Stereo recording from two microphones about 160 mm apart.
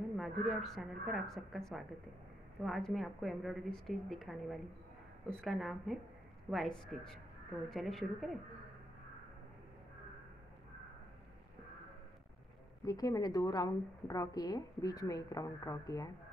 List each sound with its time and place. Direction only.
0.2 s a woman's voice: centre (ahead or behind)
12.8 s a woman's voice: 25° left (ahead or behind)